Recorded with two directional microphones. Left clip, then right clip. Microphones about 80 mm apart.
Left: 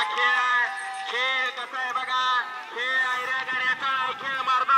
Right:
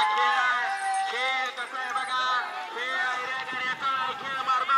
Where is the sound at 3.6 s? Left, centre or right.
Centre.